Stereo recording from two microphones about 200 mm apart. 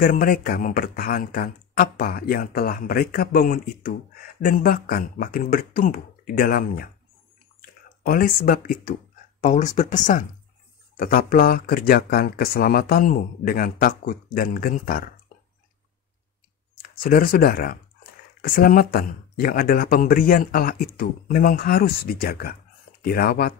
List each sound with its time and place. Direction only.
0.0 s speech: 45° left (ahead or behind)
8.1 s speech: 45° left (ahead or behind)
17.0 s speech: 45° left (ahead or behind)